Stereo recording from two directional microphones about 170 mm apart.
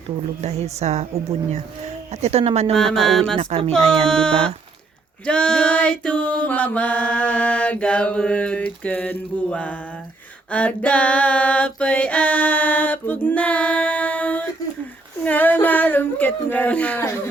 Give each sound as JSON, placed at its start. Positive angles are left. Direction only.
{"t": 0.4, "sound": "speech", "side_deg": -40}
{"t": 2.7, "sound": "speech", "side_deg": 0}
{"t": 3.3, "sound": "speech", "side_deg": -30}
{"t": 4.0, "sound": "speech", "side_deg": 5}
{"t": 5.2, "sound": "a sound", "side_deg": 5}
{"t": 10.5, "sound": "female singing", "side_deg": 10}
{"t": 15.2, "sound": "a sound", "side_deg": 10}